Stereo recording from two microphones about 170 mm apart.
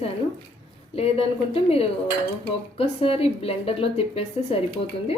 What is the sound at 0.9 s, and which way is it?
Cutlery, 35° left (ahead or behind).